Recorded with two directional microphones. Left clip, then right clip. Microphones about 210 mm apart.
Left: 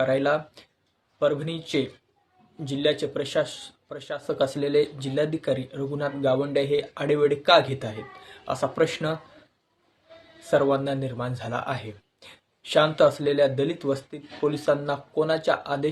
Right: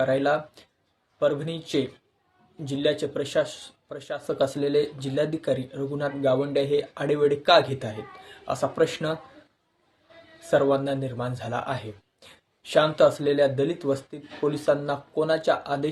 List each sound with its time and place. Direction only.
0.0 s speech: centre (ahead or behind)
10.4 s speech: centre (ahead or behind)